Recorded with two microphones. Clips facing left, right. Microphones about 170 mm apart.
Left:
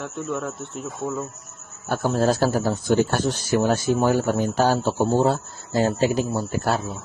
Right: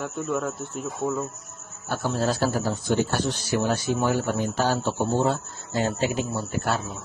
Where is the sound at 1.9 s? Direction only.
50° left (ahead or behind).